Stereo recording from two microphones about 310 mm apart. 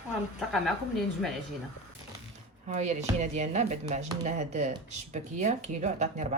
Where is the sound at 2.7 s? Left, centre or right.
Right.